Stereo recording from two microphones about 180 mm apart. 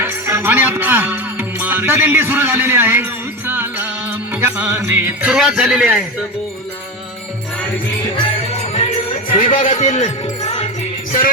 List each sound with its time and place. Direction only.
0.0 s music: 10° right (ahead or behind)
8.1 s music: 35° left (ahead or behind)
9.3 s a man's voice: 45° left (ahead or behind)
10.4 s music: 35° left (ahead or behind)